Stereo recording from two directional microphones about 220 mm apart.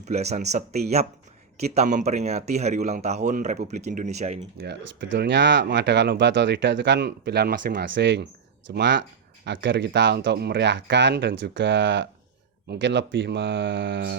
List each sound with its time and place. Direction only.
0.0 s speech: 30° right (ahead or behind)
4.5 s speech: 50° right (ahead or behind)